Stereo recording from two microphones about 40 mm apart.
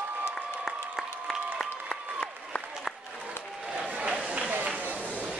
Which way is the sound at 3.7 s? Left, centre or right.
Right.